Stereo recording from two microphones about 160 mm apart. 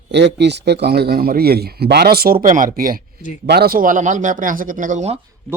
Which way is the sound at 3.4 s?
80° right.